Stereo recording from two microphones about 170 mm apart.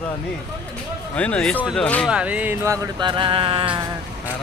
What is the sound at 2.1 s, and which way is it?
Music, 5° right (ahead or behind).